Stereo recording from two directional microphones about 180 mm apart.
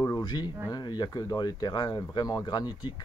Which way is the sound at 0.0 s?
20° left (ahead or behind).